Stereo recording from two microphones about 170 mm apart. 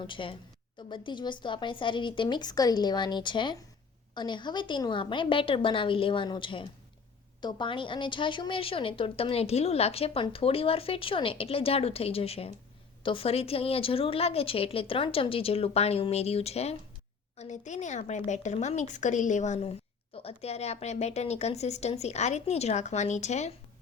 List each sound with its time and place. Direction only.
0.1 s a woman's voice: 30° left (ahead or behind)